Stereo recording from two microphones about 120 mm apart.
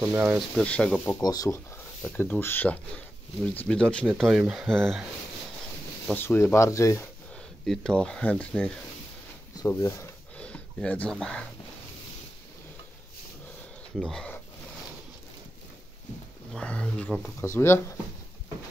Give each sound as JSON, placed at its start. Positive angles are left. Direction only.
{"t": 0.0, "sound": "speech", "side_deg": -15}
{"t": 0.7, "sound": "speech", "side_deg": 10}
{"t": 1.2, "sound": "speech", "side_deg": 30}
{"t": 2.0, "sound": "speech", "side_deg": 10}
{"t": 6.1, "sound": "speech", "side_deg": 20}
{"t": 7.6, "sound": "speech", "side_deg": 5}
{"t": 9.8, "sound": "speech", "side_deg": 25}
{"t": 10.3, "sound": "a sound", "side_deg": 10}
{"t": 13.9, "sound": "speech", "side_deg": 5}
{"t": 16.5, "sound": "speech", "side_deg": 10}